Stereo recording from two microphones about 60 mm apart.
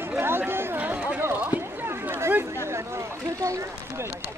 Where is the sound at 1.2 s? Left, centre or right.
Right.